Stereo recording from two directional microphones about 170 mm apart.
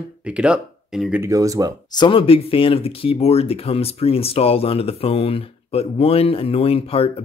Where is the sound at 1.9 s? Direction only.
25° left (ahead or behind).